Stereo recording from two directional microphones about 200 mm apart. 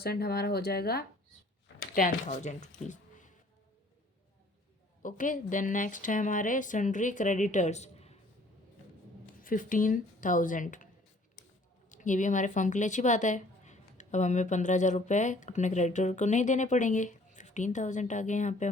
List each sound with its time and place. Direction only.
0.0 s speech: 50° left (ahead or behind)
2.0 s speech: 40° left (ahead or behind)
5.0 s speech: 40° left (ahead or behind)
9.4 s speech: 45° left (ahead or behind)
11.9 s speech: 40° left (ahead or behind)